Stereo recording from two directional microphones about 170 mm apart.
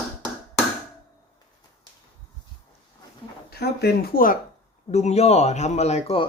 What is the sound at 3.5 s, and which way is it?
Speech, 70° left (ahead or behind).